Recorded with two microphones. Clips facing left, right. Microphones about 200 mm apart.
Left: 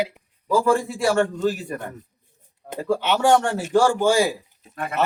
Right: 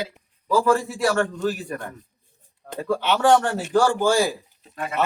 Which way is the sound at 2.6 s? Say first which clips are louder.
Left 1 dB; 20° left (ahead or behind).